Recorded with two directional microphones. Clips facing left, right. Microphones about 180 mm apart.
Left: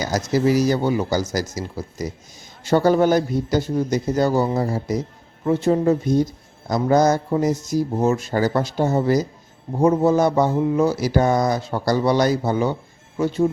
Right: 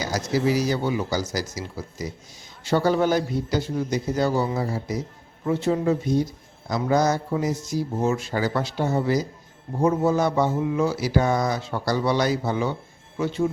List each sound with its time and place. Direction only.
0.1 s speech: 45° left (ahead or behind)